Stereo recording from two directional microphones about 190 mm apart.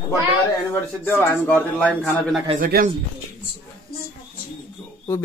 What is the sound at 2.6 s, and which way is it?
Speech, 50° right (ahead or behind).